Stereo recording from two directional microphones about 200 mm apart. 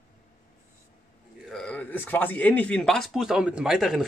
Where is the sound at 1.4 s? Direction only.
5° left (ahead or behind).